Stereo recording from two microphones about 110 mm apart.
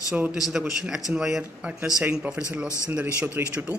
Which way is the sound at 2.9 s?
15° right (ahead or behind).